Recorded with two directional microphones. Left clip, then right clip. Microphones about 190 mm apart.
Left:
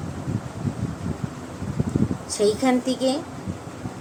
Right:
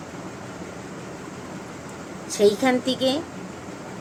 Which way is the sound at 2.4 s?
10° right (ahead or behind).